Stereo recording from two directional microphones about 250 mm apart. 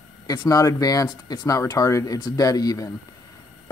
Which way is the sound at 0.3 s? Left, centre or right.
Centre.